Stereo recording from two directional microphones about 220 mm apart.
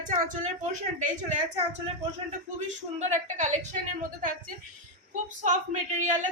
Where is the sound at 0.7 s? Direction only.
35° right (ahead or behind).